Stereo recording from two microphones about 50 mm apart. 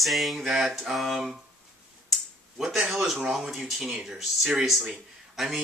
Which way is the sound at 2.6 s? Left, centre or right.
Centre.